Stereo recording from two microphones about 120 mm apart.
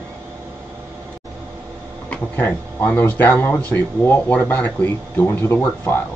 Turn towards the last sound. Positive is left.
turn(degrees=20)  # may be behind; listen again after turning